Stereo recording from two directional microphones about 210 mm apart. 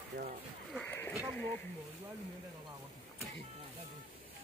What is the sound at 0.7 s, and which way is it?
Speech, 10° left (ahead or behind).